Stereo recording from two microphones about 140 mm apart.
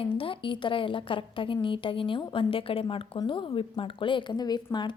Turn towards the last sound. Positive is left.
turn(degrees=30)  # may be behind; listen again after turning